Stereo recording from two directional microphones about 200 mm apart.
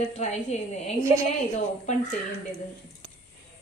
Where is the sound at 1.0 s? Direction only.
15° right (ahead or behind).